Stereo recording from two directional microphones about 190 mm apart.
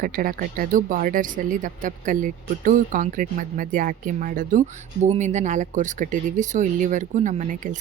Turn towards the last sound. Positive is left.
turn(degrees=-40)  # may be behind; listen again after turning